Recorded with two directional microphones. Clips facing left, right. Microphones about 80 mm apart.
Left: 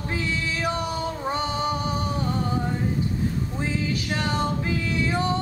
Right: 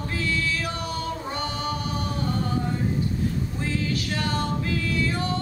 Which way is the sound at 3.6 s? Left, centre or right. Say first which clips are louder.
Left 1 dB; left.